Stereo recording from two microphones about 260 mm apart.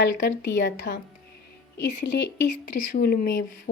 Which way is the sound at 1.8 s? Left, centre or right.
Left.